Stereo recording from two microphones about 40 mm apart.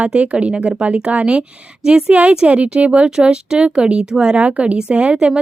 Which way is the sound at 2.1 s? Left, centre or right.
Right.